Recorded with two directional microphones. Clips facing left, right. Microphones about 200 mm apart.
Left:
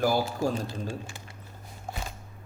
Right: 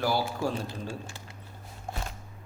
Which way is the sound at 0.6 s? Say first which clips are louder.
Left 2 dB; 20° left (ahead or behind).